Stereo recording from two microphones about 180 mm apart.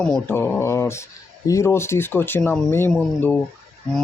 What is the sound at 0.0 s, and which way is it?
Speech, 10° left (ahead or behind).